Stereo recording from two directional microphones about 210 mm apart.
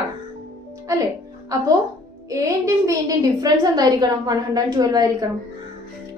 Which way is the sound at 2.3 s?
15° right (ahead or behind).